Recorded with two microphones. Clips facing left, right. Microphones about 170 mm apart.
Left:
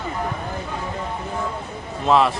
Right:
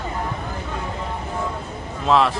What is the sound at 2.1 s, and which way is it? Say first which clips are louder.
Speech: left 1 dB; centre (ahead or behind).